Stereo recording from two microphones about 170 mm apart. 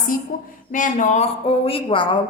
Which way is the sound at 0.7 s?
50° left (ahead or behind).